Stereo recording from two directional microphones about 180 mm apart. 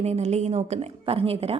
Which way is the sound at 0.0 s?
35° right (ahead or behind).